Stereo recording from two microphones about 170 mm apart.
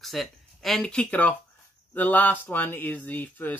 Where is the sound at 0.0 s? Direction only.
Centre (ahead or behind).